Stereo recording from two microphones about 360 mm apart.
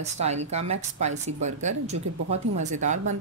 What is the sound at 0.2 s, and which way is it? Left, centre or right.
Speech, centre.